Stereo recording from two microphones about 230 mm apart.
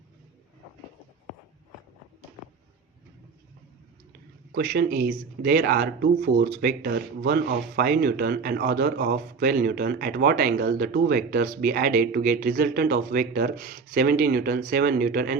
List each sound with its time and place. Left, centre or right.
4.5 s speech: right